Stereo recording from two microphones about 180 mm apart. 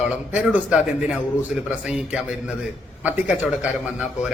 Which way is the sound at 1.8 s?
5° right (ahead or behind).